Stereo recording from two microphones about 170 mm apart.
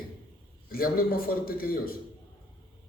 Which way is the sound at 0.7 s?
60° left (ahead or behind).